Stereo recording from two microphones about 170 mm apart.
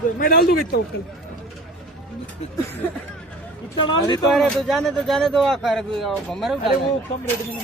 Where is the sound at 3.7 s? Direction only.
30° left (ahead or behind).